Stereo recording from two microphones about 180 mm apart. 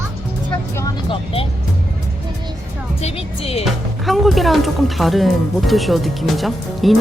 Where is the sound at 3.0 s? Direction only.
35° left (ahead or behind).